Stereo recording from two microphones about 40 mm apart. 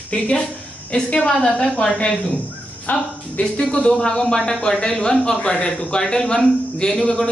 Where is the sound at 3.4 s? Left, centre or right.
Left.